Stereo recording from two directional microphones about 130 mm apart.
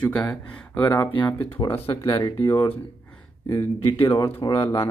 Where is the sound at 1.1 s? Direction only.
40° left (ahead or behind).